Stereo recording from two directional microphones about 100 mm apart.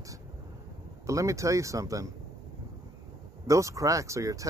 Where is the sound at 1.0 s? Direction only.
30° right (ahead or behind).